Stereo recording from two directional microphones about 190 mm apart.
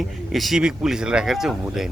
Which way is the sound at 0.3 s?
Centre (ahead or behind).